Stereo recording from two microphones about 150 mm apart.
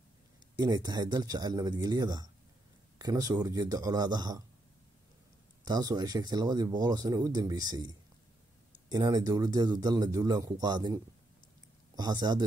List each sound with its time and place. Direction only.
0.6 s speech: 25° right (ahead or behind)
5.7 s speech: 25° right (ahead or behind)